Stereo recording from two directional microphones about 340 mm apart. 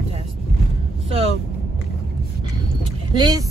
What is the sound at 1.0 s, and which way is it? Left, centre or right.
Vehicle, centre.